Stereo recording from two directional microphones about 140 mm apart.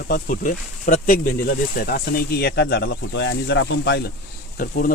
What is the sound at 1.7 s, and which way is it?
Speech, 90° left.